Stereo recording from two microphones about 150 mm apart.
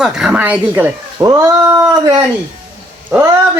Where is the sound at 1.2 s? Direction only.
25° right (ahead or behind).